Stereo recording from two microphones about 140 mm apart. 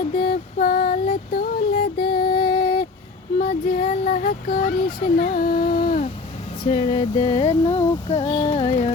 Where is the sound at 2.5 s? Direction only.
80° left.